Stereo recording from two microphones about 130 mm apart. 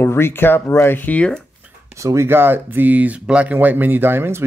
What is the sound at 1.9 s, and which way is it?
Speech, 20° right (ahead or behind).